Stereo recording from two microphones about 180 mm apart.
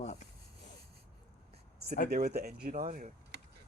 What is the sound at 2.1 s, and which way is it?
Speech, 60° right (ahead or behind).